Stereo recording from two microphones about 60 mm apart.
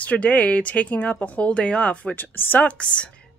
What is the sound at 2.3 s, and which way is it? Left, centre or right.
Speech, left.